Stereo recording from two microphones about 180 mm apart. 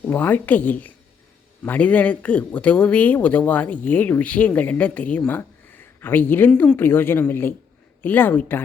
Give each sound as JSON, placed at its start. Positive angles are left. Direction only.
{"t": 0.1, "sound": "a man's voice", "side_deg": 10}